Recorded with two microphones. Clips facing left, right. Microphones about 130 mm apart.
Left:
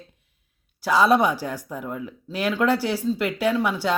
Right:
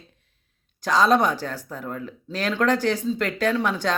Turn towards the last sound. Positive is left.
turn(degrees=10)  # may be behind; listen again after turning